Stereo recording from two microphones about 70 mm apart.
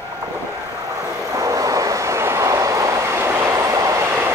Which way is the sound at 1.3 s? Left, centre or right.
Right.